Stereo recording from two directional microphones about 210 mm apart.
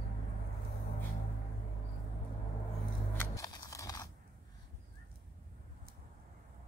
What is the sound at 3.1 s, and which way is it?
Music, 15° left (ahead or behind).